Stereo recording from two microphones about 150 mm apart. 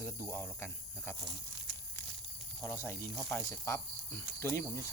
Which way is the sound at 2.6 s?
15° left (ahead or behind).